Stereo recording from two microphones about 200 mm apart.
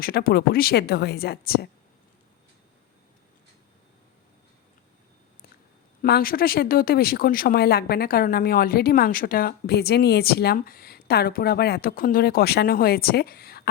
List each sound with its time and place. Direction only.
0.0 s speech: 50° left (ahead or behind)
6.0 s speech: 45° left (ahead or behind)